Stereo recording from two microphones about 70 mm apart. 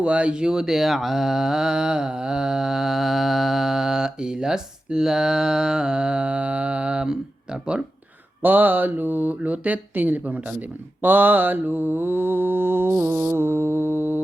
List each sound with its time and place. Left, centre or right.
0.0 s speech: centre
8.4 s speech: right
11.0 s mantra: right